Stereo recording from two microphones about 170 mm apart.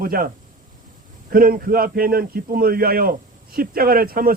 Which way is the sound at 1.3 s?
60° right (ahead or behind).